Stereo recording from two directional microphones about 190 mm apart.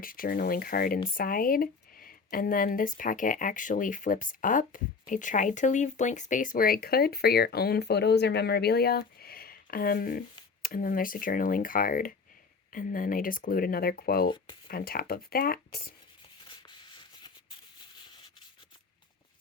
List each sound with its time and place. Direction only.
0.0 s speech: 50° left (ahead or behind)
14.3 s speech: 25° left (ahead or behind)
14.7 s speech: 50° left (ahead or behind)
16.4 s a sound: 25° left (ahead or behind)